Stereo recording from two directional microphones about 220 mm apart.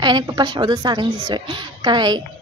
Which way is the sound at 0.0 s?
20° right (ahead or behind).